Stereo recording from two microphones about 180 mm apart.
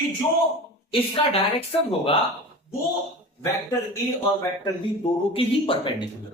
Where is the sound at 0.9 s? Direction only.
30° left (ahead or behind).